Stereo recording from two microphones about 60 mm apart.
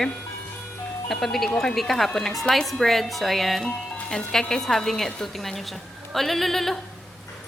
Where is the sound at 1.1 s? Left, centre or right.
Centre.